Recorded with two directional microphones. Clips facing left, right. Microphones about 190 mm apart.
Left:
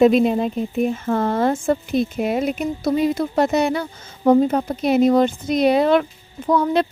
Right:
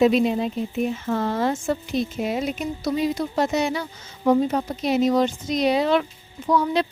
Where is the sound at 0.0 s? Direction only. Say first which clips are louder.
Left 4 dB; 50° left (ahead or behind).